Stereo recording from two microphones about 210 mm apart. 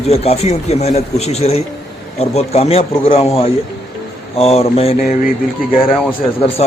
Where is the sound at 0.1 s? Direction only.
30° left (ahead or behind).